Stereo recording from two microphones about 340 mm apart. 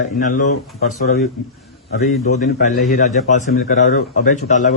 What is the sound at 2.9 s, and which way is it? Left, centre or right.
Speech, left.